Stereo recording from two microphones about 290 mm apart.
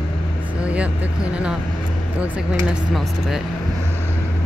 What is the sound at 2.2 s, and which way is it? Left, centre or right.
Speech, centre.